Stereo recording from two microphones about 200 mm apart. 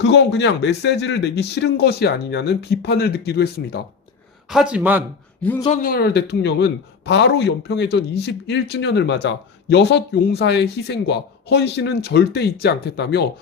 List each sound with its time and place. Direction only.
0.0 s a man's voice: 60° left (ahead or behind)
4.4 s a man's voice: 5° right (ahead or behind)
5.4 s speech: 10° left (ahead or behind)
5.6 s a man's voice: 40° left (ahead or behind); by 13.2 s 55° left (ahead or behind)